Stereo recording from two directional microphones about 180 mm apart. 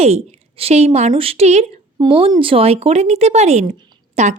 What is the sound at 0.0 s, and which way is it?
Speech, 35° right (ahead or behind).